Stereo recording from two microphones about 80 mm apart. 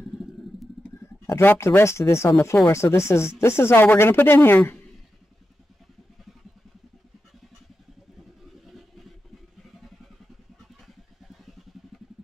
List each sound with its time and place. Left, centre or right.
1.0 s speech: left
11.2 s vehicle: centre